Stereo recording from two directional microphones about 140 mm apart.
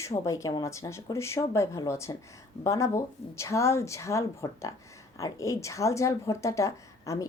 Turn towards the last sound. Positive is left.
turn(degrees=25)  # may be behind; listen again after turning